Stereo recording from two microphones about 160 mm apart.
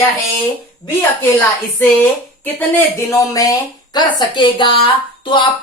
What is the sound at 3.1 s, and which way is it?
A woman's voice, 20° left (ahead or behind).